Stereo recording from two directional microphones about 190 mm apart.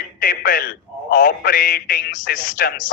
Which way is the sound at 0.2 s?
50° left (ahead or behind).